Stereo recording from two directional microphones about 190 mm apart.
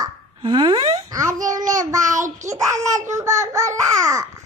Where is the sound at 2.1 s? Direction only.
40° right (ahead or behind).